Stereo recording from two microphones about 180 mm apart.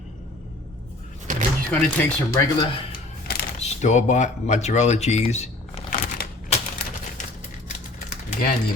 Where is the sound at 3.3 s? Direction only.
60° left (ahead or behind).